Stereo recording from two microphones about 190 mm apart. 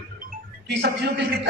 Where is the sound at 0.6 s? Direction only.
65° right (ahead or behind).